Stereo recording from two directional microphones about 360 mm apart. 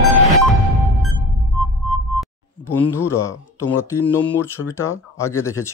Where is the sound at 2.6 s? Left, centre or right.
Centre.